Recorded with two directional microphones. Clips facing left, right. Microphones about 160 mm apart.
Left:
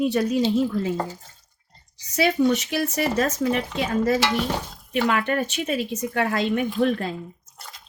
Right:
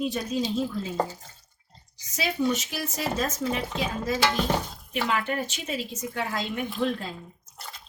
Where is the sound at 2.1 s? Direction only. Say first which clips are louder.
Left 6 dB; 65° left (ahead or behind).